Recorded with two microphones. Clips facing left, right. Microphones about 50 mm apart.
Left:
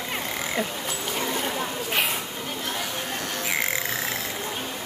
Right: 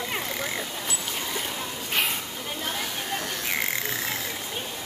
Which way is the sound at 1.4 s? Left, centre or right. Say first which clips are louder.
Left 5 dB; left.